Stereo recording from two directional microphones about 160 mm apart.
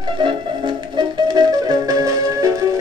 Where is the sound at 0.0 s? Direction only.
30° right (ahead or behind).